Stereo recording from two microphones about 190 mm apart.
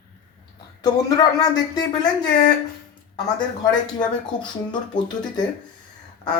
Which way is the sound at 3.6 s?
20° left (ahead or behind).